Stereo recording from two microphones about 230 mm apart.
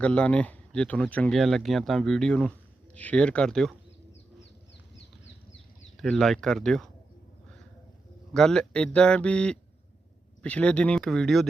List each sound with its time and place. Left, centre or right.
0.0 s speech: centre
5.2 s a sound: left
6.0 s speech: centre
8.3 s speech: centre